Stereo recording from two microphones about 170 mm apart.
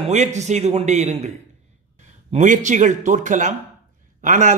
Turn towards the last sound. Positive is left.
turn(degrees=-45)  # may be behind; listen again after turning